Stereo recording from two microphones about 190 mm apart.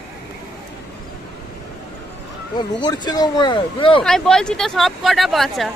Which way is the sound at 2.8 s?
20° left (ahead or behind).